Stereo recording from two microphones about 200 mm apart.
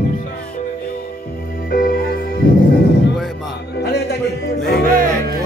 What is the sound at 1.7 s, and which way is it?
Music, 50° left (ahead or behind).